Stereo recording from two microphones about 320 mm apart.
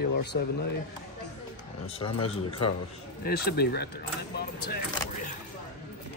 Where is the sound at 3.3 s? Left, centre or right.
Left.